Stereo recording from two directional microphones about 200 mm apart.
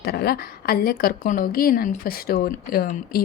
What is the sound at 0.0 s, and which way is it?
A woman's voice, 50° left (ahead or behind).